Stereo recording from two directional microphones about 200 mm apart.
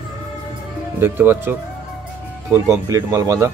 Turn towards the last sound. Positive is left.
turn(degrees=-15)  # may be behind; listen again after turning